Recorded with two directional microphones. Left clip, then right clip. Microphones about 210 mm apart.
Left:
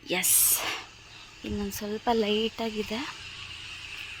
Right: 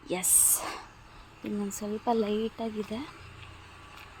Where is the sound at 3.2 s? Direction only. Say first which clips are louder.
Left 9 dB; 40° right (ahead or behind).